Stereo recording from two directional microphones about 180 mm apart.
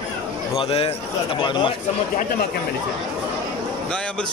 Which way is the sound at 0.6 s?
30° left (ahead or behind).